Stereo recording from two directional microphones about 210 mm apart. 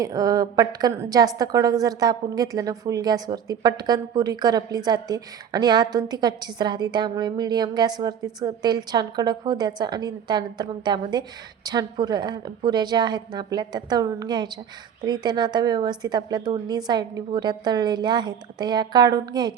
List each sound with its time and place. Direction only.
0.0 s a woman's voice: 15° right (ahead or behind)